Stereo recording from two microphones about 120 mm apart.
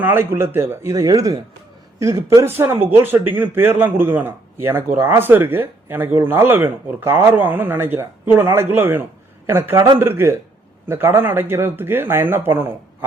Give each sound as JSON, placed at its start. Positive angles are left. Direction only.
{"t": 0.0, "sound": "a man's voice", "side_deg": -20}